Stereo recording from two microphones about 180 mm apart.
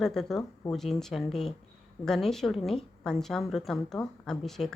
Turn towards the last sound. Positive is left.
turn(degrees=0)  # may be behind; listen again after turning